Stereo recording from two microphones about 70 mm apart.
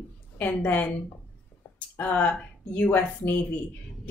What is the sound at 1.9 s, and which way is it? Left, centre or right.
Speech, left.